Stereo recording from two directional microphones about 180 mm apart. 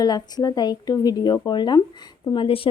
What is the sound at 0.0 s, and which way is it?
Speech, 20° left (ahead or behind).